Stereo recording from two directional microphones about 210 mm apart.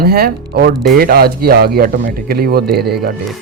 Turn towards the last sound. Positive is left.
turn(degrees=-50)  # may be behind; listen again after turning